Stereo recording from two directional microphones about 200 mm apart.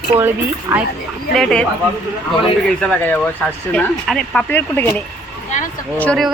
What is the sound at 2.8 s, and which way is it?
Speech, 5° left (ahead or behind).